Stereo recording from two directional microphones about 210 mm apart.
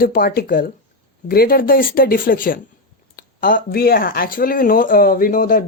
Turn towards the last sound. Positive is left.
turn(degrees=40)  # may be behind; listen again after turning